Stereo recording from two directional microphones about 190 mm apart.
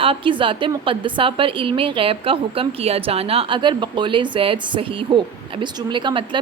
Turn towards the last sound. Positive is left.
turn(degrees=-25)  # may be behind; listen again after turning